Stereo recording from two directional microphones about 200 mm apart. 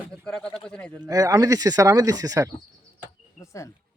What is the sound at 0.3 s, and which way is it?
Speech, 5° left (ahead or behind).